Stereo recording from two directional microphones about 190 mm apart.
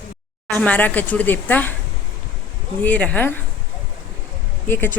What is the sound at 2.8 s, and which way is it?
Speech, 5° left (ahead or behind).